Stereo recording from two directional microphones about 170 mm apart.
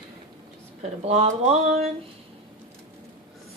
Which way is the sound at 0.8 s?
40° right (ahead or behind).